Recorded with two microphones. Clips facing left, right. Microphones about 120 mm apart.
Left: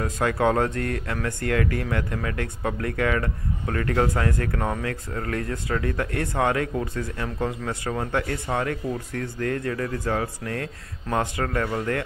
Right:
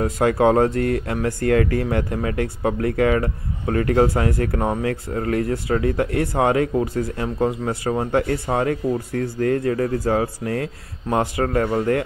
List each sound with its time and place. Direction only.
0.0 s speech: 25° right (ahead or behind)